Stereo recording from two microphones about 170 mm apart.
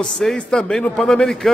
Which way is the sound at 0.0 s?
Centre (ahead or behind).